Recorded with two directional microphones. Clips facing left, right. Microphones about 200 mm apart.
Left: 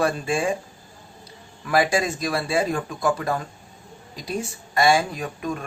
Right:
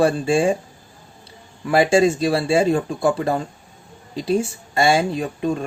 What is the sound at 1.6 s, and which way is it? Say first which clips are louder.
Speech: right 6 dB; 25° right (ahead or behind).